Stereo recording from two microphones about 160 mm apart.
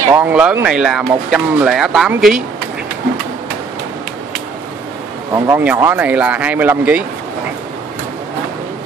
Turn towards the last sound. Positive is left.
turn(degrees=-10)  # may be behind; listen again after turning